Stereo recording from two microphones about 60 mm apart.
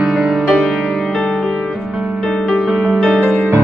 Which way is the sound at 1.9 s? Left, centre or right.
Centre.